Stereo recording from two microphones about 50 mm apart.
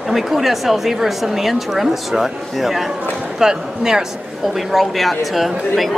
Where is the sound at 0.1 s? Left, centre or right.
Centre.